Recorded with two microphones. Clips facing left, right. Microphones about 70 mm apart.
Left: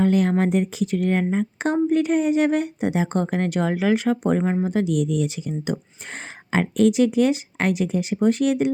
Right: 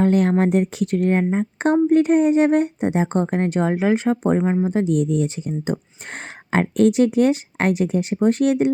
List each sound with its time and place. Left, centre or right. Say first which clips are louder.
0.0 s speech: right 2 dB; right
1.2 s speech: right 2 dB; right
1.5 s speech: right 5 dB; right